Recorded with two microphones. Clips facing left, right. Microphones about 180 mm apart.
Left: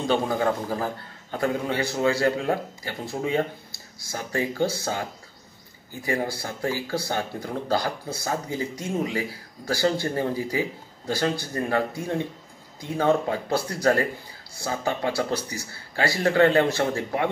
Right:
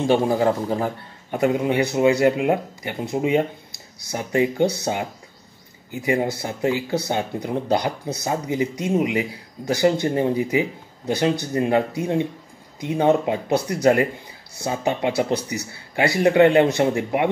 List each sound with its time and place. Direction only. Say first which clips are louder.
0.0 s speech: right 5 dB; 25° right (ahead or behind)